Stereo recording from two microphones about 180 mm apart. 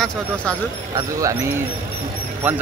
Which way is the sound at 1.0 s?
20° right (ahead or behind).